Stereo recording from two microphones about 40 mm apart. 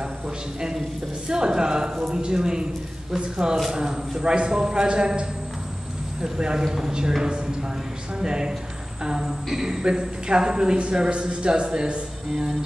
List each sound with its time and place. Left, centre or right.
1.3 s a man's voice: centre
6.2 s a man's voice: right
12.3 s music: centre